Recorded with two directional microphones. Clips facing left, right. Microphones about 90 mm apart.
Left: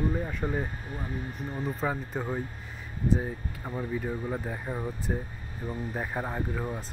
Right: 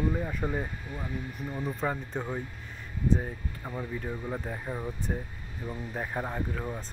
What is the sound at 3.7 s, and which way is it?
Speech, 5° left (ahead or behind).